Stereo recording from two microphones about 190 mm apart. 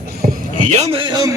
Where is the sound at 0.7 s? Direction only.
35° right (ahead or behind).